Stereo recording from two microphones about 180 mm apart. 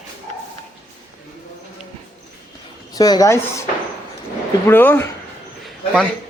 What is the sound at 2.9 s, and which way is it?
Speech, 20° left (ahead or behind).